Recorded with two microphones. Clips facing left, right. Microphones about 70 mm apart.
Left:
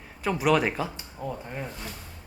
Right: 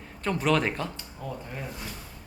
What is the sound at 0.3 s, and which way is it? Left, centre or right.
Speech, centre.